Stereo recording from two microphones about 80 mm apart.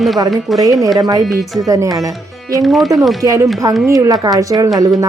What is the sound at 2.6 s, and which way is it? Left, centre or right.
Speech, centre.